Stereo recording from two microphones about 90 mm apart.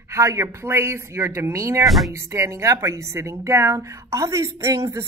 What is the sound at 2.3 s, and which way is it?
A woman's voice, 35° right (ahead or behind).